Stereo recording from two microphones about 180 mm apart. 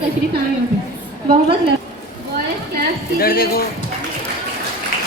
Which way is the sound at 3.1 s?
55° left (ahead or behind).